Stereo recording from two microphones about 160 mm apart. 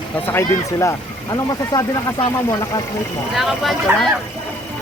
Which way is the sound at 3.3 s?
Centre (ahead or behind).